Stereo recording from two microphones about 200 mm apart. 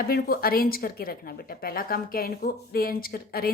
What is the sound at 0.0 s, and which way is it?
A woman's voice, 50° left (ahead or behind).